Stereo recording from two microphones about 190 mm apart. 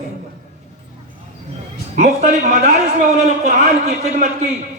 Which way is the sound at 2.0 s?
40° right (ahead or behind).